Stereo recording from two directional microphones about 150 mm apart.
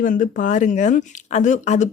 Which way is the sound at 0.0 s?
65° left (ahead or behind).